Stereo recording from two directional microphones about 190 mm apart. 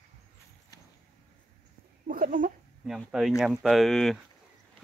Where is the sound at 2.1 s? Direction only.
45° right (ahead or behind).